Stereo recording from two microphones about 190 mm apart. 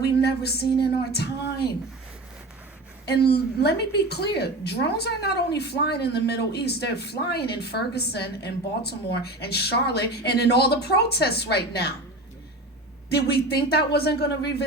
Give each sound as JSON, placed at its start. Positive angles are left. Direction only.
{"t": 0.0, "sound": "a woman's voice", "side_deg": 60}
{"t": 3.1, "sound": "a woman's voice", "side_deg": 60}
{"t": 13.1, "sound": "a woman's voice", "side_deg": 60}